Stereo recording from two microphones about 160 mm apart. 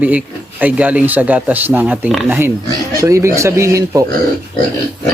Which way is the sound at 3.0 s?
20° right (ahead or behind).